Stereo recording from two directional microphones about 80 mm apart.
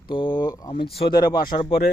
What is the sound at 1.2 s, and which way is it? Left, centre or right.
Speech, left.